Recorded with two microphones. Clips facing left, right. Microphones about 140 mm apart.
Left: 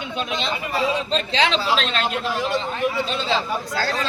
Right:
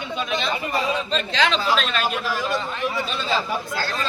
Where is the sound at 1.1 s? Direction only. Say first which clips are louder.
Left 1 dB; 30° left (ahead or behind).